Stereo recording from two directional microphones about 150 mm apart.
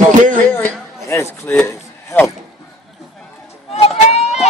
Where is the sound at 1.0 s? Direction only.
15° left (ahead or behind).